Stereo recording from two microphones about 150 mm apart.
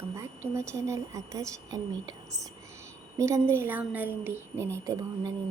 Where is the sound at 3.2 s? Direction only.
20° right (ahead or behind).